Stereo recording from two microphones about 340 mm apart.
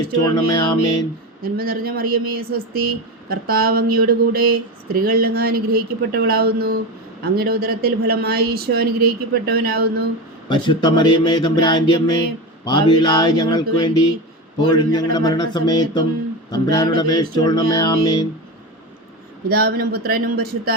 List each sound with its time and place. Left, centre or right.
0.3 s speech: centre
1.4 s speech: right
10.5 s speech: centre
19.5 s speech: right